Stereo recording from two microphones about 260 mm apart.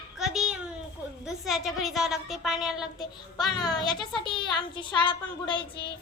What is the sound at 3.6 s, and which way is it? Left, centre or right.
Speech, centre.